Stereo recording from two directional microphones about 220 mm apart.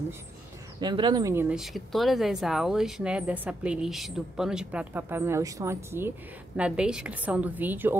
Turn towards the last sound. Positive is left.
turn(degrees=-10)  # may be behind; listen again after turning